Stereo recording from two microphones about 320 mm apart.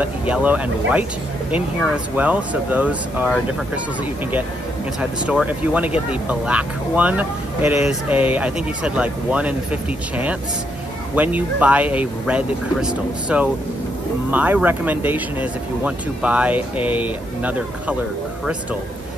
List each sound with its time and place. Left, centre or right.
0.0 s speech: centre
5.2 s speech: centre